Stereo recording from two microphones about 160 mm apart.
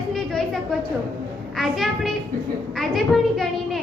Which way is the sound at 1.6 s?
Centre (ahead or behind).